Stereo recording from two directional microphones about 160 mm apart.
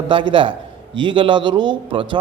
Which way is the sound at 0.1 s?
30° right (ahead or behind).